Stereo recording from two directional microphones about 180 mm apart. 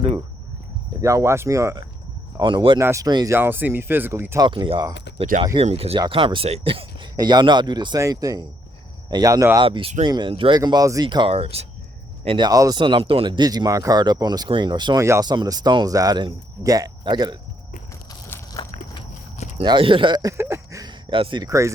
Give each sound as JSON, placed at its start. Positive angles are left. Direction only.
{"t": 1.0, "sound": "speech", "side_deg": -15}
{"t": 2.4, "sound": "speech", "side_deg": -25}
{"t": 4.4, "sound": "speech", "side_deg": -25}
{"t": 5.1, "sound": "speech", "side_deg": -40}
{"t": 9.6, "sound": "speech", "side_deg": -30}
{"t": 18.3, "sound": "a sound", "side_deg": 15}
{"t": 19.5, "sound": "speech", "side_deg": -30}